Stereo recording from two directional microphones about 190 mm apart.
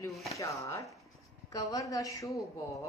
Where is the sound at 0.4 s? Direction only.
15° left (ahead or behind).